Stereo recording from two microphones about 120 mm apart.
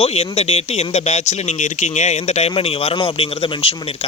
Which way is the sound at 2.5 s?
55° left (ahead or behind).